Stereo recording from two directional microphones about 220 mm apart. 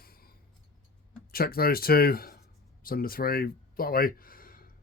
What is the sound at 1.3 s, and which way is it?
Speech, 45° left (ahead or behind).